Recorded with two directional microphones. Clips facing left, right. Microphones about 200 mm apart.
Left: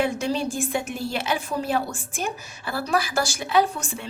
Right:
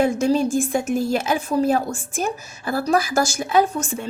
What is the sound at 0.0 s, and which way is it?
A woman's voice, 45° right (ahead or behind).